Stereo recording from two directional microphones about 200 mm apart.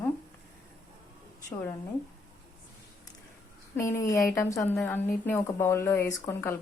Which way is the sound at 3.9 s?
15° left (ahead or behind).